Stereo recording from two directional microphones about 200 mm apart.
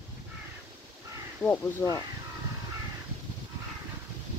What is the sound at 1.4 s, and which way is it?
Speech, 10° left (ahead or behind).